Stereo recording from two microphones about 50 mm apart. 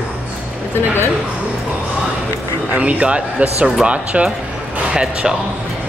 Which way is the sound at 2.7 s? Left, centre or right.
Right.